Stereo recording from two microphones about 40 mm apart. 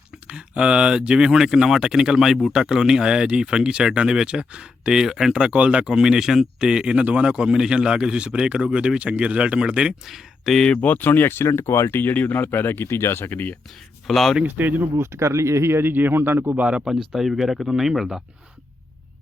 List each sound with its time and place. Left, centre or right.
0.3 s speech: right
5.3 s speech: right
5.9 s speech: centre
6.7 s speech: centre
10.1 s speech: centre
10.8 s speech: left
12.5 s speech: left
13.3 s speech: left
14.1 s speech: centre
14.4 s speech: right
14.8 s speech: right
15.7 s speech: right
16.7 s speech: centre